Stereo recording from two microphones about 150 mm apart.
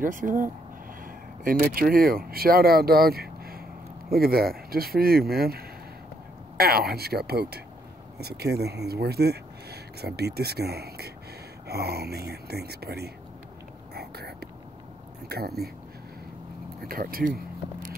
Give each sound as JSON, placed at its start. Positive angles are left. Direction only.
{"t": 0.0, "sound": "speech", "side_deg": -65}
{"t": 13.9, "sound": "whispering", "side_deg": -90}
{"t": 15.2, "sound": "speech", "side_deg": -90}
{"t": 16.8, "sound": "speech", "side_deg": -75}